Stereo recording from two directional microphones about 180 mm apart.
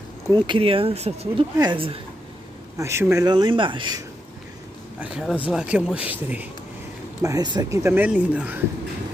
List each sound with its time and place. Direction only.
0.3 s speech: 30° right (ahead or behind)
2.8 s speech: 15° right (ahead or behind)
5.0 s speech: 5° right (ahead or behind)
7.2 s speech: 20° right (ahead or behind)
7.8 s speech: 10° right (ahead or behind)